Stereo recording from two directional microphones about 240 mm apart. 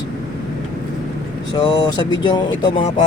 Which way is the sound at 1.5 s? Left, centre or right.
Centre.